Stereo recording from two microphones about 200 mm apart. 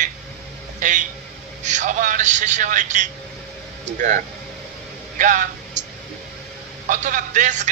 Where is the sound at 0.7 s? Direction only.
40° right (ahead or behind).